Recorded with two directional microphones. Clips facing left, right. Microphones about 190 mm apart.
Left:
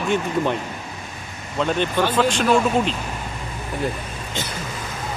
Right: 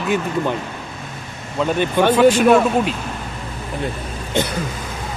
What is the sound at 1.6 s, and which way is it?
Speech, 10° right (ahead or behind).